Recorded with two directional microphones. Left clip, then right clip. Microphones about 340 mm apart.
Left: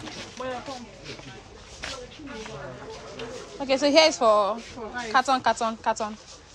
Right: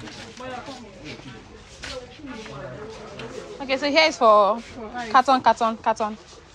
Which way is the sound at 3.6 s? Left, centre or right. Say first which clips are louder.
Even; centre.